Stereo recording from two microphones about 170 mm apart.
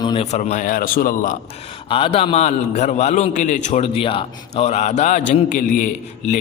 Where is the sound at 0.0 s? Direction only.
30° left (ahead or behind).